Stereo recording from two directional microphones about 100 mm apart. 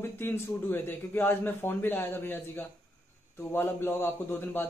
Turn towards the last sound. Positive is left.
turn(degrees=20)  # may be behind; listen again after turning